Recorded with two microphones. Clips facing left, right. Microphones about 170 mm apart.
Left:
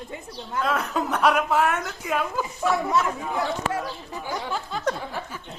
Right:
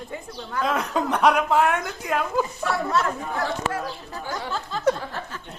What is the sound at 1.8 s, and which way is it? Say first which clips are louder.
Speech: right 1 dB; 10° left (ahead or behind).